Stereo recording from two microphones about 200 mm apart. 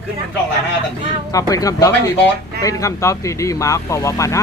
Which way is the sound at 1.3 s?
15° left (ahead or behind).